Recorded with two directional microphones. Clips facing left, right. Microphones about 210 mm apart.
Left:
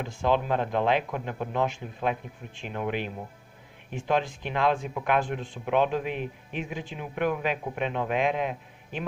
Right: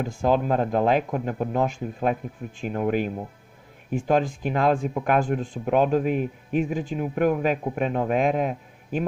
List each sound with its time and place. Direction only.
0.0 s speech: 45° right (ahead or behind)